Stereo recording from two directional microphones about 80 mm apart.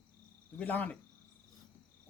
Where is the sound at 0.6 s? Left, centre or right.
Centre.